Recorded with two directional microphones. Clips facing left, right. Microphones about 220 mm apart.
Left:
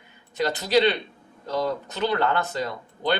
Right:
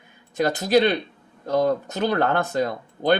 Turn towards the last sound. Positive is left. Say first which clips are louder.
# right 5 dB
turn(degrees=-45)  # may be behind; listen again after turning